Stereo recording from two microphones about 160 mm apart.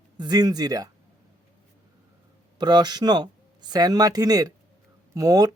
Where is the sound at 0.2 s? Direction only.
25° right (ahead or behind).